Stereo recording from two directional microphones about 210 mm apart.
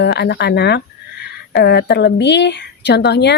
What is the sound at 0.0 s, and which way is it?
A woman's voice, 55° left (ahead or behind).